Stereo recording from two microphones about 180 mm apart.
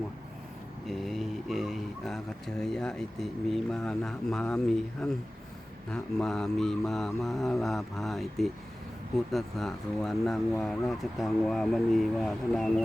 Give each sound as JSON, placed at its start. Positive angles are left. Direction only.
{"t": 0.9, "sound": "speech", "side_deg": 0}